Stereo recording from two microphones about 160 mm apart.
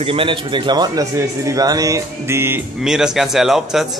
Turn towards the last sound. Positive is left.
turn(degrees=0)  # may be behind; listen again after turning